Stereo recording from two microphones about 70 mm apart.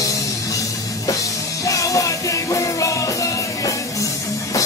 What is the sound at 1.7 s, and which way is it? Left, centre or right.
Music, left.